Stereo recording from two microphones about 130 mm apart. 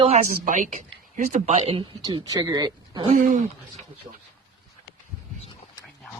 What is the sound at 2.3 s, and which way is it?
Speech, 30° right (ahead or behind).